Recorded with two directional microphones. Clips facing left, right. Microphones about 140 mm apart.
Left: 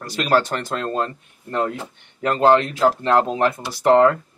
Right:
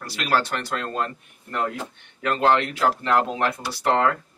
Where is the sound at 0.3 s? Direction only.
25° left (ahead or behind).